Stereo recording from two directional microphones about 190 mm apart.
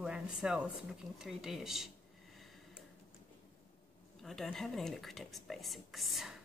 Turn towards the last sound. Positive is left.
turn(degrees=0)  # may be behind; listen again after turning